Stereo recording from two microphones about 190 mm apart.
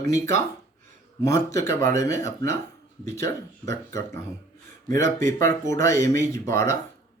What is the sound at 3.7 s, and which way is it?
Speech, 15° left (ahead or behind).